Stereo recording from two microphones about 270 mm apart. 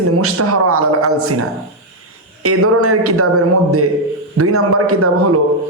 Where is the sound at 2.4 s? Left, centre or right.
Right.